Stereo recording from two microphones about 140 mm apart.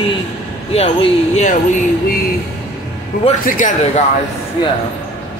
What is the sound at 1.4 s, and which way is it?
Speech, 65° left (ahead or behind).